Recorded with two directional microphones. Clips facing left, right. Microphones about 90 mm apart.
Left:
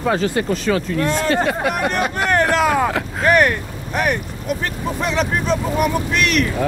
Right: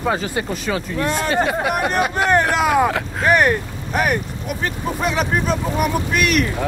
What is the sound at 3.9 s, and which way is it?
Speech, 5° right (ahead or behind).